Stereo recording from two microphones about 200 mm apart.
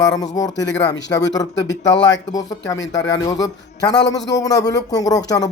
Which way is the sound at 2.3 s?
20° left (ahead or behind).